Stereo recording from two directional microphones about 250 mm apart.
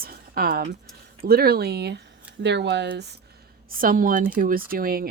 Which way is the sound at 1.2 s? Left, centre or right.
Right.